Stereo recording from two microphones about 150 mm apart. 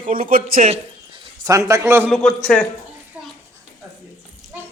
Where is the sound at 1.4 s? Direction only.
20° right (ahead or behind).